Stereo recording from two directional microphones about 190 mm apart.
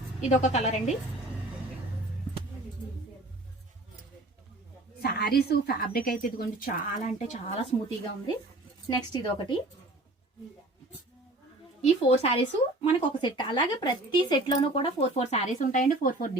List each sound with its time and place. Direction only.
0.2 s speech: 35° left (ahead or behind)
4.9 s a woman's voice: 55° left (ahead or behind); by 7.8 s 35° left (ahead or behind)
8.9 s speech: 25° left (ahead or behind)
11.8 s speech: 35° left (ahead or behind)